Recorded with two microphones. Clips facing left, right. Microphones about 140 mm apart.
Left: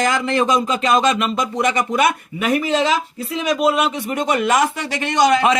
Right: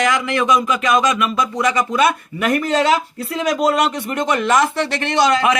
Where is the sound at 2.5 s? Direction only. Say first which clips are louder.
Right 1 dB; 10° left (ahead or behind).